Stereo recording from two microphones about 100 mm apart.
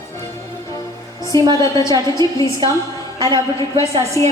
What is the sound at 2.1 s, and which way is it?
Speech, 35° left (ahead or behind).